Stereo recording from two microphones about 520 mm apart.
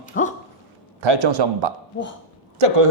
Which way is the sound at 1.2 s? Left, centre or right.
Right.